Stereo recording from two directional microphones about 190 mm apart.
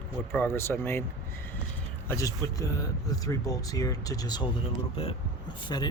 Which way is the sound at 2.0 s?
15° left (ahead or behind).